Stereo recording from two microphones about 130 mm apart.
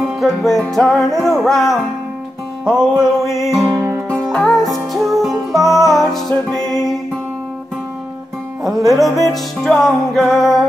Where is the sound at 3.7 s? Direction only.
20° right (ahead or behind).